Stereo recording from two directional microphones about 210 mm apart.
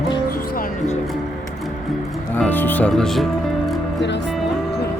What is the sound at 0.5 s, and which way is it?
Music, 45° left (ahead or behind).